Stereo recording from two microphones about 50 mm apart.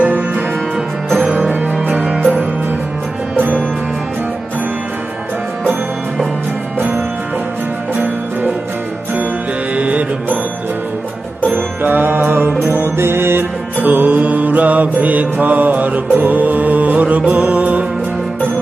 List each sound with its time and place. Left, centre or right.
0.0 s music: right
6.7 s music: right
9.7 s music: right
11.4 s music: right
13.7 s mantra: right